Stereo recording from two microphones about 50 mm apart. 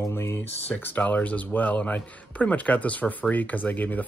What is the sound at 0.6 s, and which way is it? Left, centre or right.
Speech, left.